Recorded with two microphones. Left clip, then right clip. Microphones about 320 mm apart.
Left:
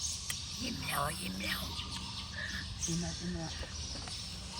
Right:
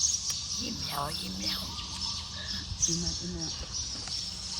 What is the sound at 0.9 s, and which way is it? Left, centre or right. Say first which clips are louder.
Speech: left 2 dB; centre.